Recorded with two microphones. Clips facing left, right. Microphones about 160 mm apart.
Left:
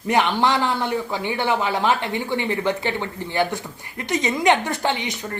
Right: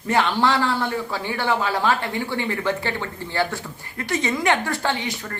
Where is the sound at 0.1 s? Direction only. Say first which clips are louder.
Left 1 dB; 15° left (ahead or behind).